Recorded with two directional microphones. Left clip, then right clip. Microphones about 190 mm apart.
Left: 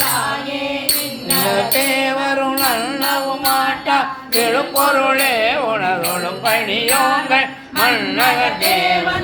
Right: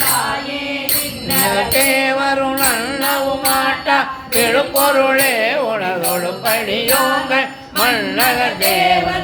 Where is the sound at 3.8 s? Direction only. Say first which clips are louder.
Right 1 dB; 15° right (ahead or behind).